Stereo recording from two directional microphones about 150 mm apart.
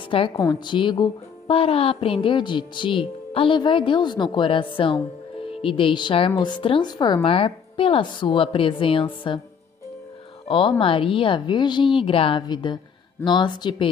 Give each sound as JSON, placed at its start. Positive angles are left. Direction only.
{"t": 0.3, "sound": "a woman's voice", "side_deg": 25}
{"t": 10.5, "sound": "a woman's voice", "side_deg": 35}